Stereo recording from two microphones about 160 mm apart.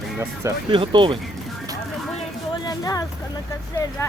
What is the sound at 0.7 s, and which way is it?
Speech, 30° right (ahead or behind).